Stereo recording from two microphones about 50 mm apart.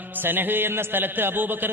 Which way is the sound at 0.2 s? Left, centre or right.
Right.